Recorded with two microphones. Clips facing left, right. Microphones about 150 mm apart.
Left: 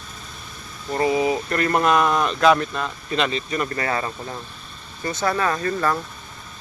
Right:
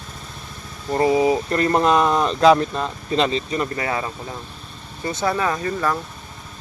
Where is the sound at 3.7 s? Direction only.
15° right (ahead or behind).